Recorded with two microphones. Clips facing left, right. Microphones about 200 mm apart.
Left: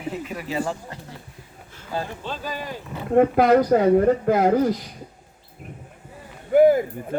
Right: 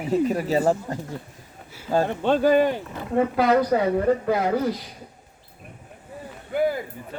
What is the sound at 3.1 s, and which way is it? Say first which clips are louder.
A man's voice: left 4 dB; 50° left (ahead or behind).